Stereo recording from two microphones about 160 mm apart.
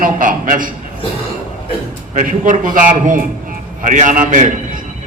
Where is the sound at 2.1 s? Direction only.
55° right (ahead or behind).